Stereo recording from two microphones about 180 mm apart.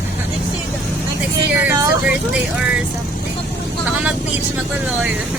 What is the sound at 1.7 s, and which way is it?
Vehicle, 20° right (ahead or behind).